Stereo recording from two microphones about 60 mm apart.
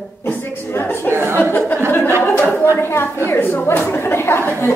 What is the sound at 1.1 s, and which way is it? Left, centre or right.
Chuckle, right.